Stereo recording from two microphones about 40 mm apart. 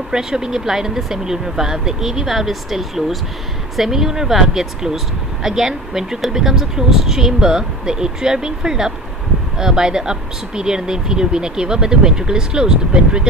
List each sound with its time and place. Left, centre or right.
0.1 s speech: centre